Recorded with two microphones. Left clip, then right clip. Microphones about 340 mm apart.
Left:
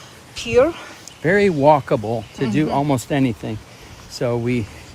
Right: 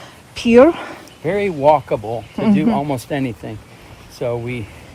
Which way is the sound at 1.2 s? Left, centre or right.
Left.